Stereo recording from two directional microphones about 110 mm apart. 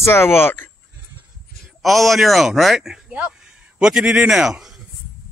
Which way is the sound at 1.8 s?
Centre (ahead or behind).